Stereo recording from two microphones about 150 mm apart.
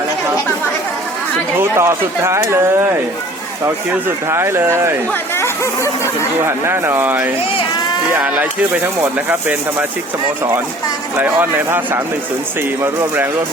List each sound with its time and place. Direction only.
1.5 s speech: 15° right (ahead or behind)
4.3 s speech: 15° right (ahead or behind)
6.4 s speech: 15° right (ahead or behind)
11.2 s speech: 15° right (ahead or behind)